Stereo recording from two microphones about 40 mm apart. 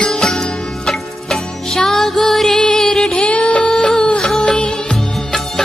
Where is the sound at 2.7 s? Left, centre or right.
Centre.